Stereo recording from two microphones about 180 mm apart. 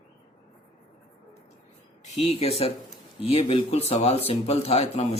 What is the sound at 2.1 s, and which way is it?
Speech, 35° left (ahead or behind).